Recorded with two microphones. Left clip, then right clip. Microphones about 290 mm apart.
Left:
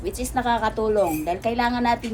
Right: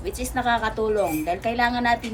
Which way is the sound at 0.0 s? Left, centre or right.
Centre.